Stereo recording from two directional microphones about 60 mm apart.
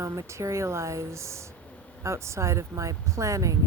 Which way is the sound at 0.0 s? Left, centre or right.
Right.